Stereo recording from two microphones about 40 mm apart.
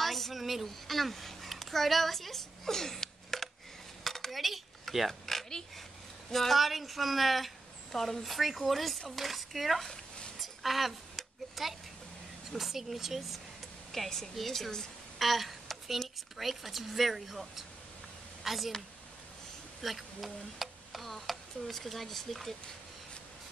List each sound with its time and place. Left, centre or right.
0.0 s a sound: centre
6.3 s speech: centre
9.8 s zipper: left
10.4 s a sound: centre
12.5 s speech: centre
13.9 s a woman's voice: centre
15.1 s a sound: centre
16.3 s speech: centre
19.8 s speech: centre